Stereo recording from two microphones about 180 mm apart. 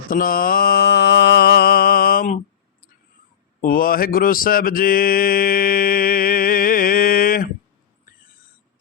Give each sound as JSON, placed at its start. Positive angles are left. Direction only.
{"t": 0.1, "sound": "mantra", "side_deg": 50}
{"t": 3.6, "sound": "mantra", "side_deg": 50}